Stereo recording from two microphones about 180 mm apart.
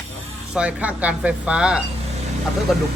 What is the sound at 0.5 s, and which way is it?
Speech, 5° right (ahead or behind).